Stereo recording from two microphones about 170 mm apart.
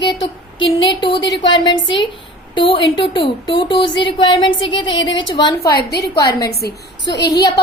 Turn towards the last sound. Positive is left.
turn(degrees=85)